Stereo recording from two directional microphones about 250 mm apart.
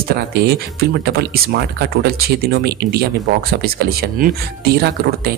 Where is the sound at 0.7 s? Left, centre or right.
Right.